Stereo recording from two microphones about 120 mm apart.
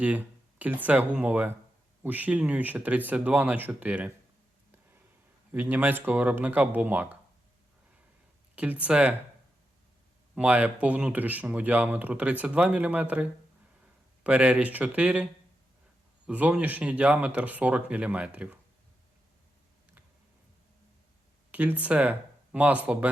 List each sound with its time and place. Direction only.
0.6 s speech: 15° right (ahead or behind)
5.5 s speech: 15° right (ahead or behind)
8.5 s speech: 15° right (ahead or behind)
10.3 s speech: 10° right (ahead or behind)
14.3 s speech: 10° right (ahead or behind)
21.5 s speech: 15° right (ahead or behind)